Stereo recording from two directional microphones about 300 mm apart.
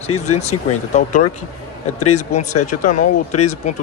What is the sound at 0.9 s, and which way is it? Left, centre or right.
Speech, left.